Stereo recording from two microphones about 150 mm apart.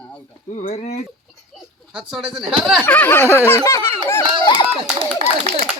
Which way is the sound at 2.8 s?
10° left (ahead or behind).